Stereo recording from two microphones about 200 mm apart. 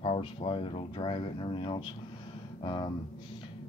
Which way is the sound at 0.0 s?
30° left (ahead or behind).